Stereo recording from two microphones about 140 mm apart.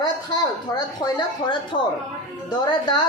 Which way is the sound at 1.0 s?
35° left (ahead or behind).